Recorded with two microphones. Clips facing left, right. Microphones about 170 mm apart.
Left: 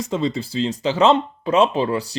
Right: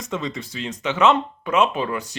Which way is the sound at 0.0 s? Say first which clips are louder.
Left 6 dB; 30° left (ahead or behind).